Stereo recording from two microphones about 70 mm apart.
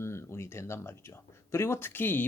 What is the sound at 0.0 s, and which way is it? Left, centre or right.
Speech, left.